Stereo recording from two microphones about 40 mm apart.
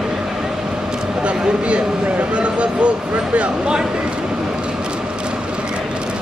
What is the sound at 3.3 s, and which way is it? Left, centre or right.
Speech, right.